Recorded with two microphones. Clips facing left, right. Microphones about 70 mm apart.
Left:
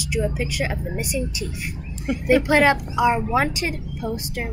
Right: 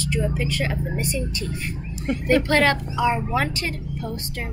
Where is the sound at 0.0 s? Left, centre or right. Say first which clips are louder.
Even; centre.